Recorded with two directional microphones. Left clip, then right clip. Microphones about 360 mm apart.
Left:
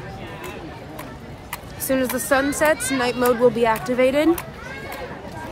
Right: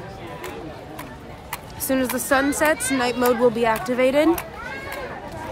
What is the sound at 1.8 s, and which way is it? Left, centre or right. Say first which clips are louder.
Speech: left 1 dB; centre.